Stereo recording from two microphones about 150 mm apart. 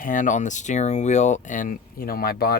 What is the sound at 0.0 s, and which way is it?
Speech, 60° left (ahead or behind).